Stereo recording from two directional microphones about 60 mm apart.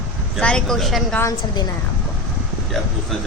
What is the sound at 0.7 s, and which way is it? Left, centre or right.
Speech, centre.